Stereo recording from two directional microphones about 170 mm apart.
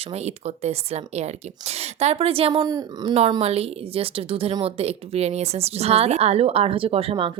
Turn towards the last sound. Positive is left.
turn(degrees=-35)  # may be behind; listen again after turning